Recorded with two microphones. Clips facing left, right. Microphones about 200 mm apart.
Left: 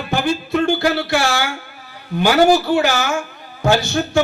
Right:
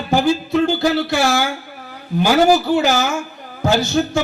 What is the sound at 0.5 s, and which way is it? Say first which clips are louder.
A man's voice: left 1 dB; 55° left (ahead or behind).